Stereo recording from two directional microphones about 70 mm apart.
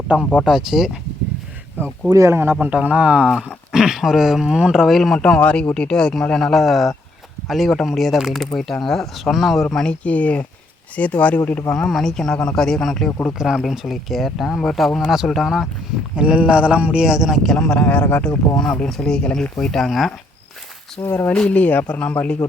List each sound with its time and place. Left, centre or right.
0.4 s speech: centre
2.0 s speech: right
2.3 s speech: right
2.6 s speech: right; by 5.2 s centre
5.2 s speech: centre
11.7 s speech: centre
13.1 s speech: left
13.4 s speech: centre
16.1 s speech: centre
21.2 s speech: centre